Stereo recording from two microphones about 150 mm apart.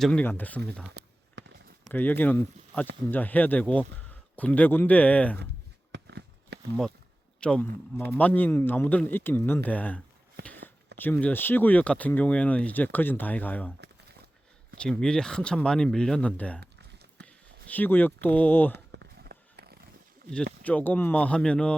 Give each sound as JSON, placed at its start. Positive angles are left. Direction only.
{"t": 0.0, "sound": "speech", "side_deg": 10}
{"t": 1.9, "sound": "speech", "side_deg": 10}
{"t": 6.5, "sound": "a sound", "side_deg": -90}
{"t": 7.3, "sound": "a man's voice", "side_deg": 5}
{"t": 14.8, "sound": "speech", "side_deg": 5}
{"t": 16.6, "sound": "a sound", "side_deg": -90}
{"t": 17.2, "sound": "speech", "side_deg": 10}
{"t": 19.2, "sound": "a sound", "side_deg": -90}
{"t": 20.3, "sound": "speech", "side_deg": 10}